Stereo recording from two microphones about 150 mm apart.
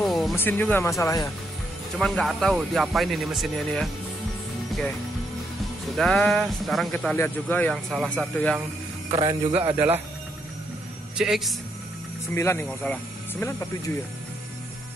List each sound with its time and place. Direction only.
0.0 s music: centre (ahead or behind)
0.4 s speech: 15° left (ahead or behind)
2.0 s speech: centre (ahead or behind)
5.9 s speech: 5° left (ahead or behind)
7.7 s speech: centre (ahead or behind)
9.1 s a man's voice: 35° right (ahead or behind)
9.8 s speech: 15° right (ahead or behind)
11.1 s speech: centre (ahead or behind)
12.4 s speech: 15° left (ahead or behind)